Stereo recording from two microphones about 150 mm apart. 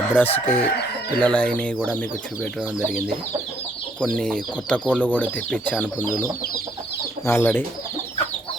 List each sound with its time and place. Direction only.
0.1 s speech: 10° left (ahead or behind)
0.6 s chicken: 90° left
1.2 s speech: 10° left (ahead or behind)
4.0 s speech: 5° left (ahead or behind)
7.3 s speech: 15° left (ahead or behind)